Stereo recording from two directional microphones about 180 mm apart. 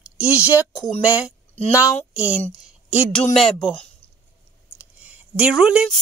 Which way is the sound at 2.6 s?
5° right (ahead or behind).